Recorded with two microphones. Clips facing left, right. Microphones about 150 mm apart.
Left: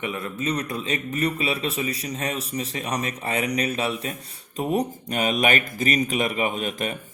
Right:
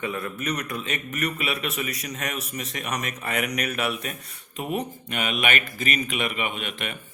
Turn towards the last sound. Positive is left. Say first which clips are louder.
# left 5 dB
turn(degrees=40)  # may be behind; listen again after turning